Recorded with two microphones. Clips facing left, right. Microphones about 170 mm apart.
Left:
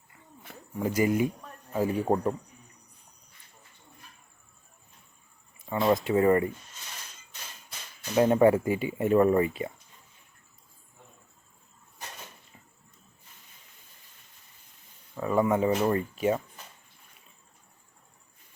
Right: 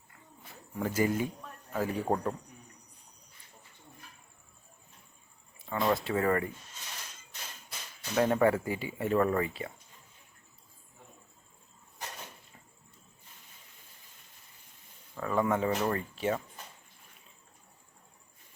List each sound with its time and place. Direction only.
0.8 s a man's voice: 15° left (ahead or behind)
5.6 s speech: 15° left (ahead or behind)
8.1 s speech: 20° left (ahead or behind)
15.1 s speech: 15° left (ahead or behind)